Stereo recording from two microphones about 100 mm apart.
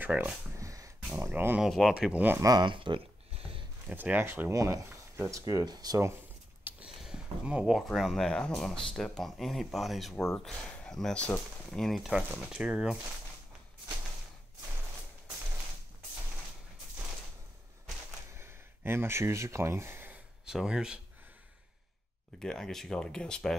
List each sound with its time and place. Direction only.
0.0 s speech: 20° right (ahead or behind)
0.6 s a sound: 30° right (ahead or behind)
1.1 s speech: 20° right (ahead or behind)
1.6 s speech: centre (ahead or behind)
2.4 s speech: 45° right (ahead or behind)
3.3 s a sound: 70° right (ahead or behind)
3.8 s speech: 15° right (ahead or behind); by 5.9 s 40° right (ahead or behind)
6.9 s speech: 5° right (ahead or behind)
12.1 s speech: 10° right (ahead or behind)
18.3 s a sound: 25° right (ahead or behind)
20.4 s speech: 5° right (ahead or behind)
22.4 s speech: 5° left (ahead or behind)